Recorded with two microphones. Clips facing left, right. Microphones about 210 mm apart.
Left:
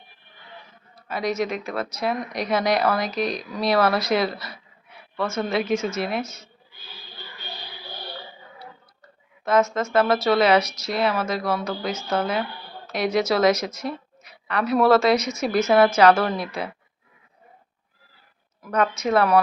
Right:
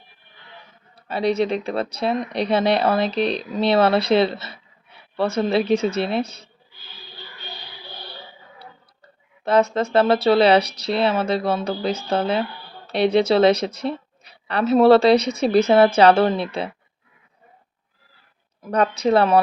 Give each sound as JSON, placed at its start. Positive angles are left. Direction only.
{"t": 1.0, "sound": "speech", "side_deg": -30}
{"t": 9.4, "sound": "speech", "side_deg": -30}
{"t": 18.6, "sound": "speech", "side_deg": -35}